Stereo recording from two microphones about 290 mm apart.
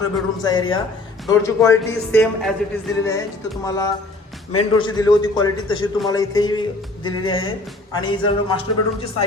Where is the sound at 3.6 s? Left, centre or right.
Centre.